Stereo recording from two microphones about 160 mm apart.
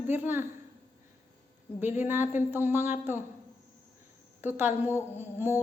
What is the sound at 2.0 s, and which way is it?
Speech, 15° right (ahead or behind).